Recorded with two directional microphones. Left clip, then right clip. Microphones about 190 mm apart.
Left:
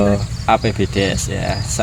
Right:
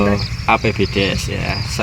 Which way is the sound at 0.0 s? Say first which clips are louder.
Even; 20° left (ahead or behind).